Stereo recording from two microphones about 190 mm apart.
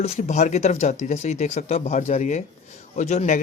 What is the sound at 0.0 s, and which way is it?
Speech, 35° left (ahead or behind).